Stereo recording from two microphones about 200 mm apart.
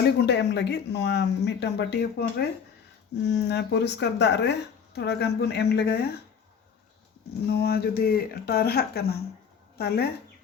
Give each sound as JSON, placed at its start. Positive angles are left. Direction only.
{"t": 0.3, "sound": "speech", "side_deg": 60}
{"t": 7.5, "sound": "speech", "side_deg": 50}